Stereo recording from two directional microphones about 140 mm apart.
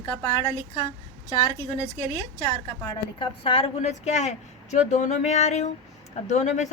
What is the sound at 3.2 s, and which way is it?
A woman's voice, 50° left (ahead or behind).